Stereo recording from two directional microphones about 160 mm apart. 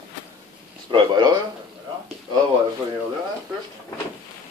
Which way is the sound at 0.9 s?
25° right (ahead or behind).